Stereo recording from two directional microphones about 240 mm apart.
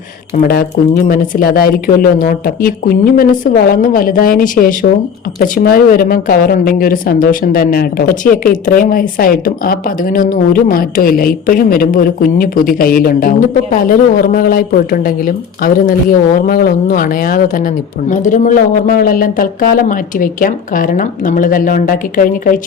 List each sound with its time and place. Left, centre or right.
1.0 s a woman's voice: left